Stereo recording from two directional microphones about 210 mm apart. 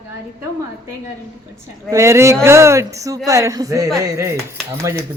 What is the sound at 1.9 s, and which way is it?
Speech, 15° right (ahead or behind).